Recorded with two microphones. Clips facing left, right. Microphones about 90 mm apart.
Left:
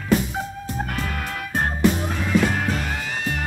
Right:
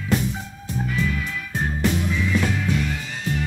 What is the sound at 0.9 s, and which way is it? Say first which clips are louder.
Music: right 2 dB; 55° left (ahead or behind).